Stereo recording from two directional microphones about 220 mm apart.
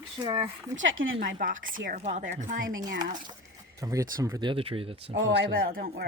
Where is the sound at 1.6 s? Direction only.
40° right (ahead or behind).